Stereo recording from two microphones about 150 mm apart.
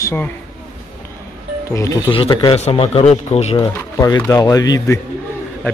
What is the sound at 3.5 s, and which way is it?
Speech, 25° left (ahead or behind).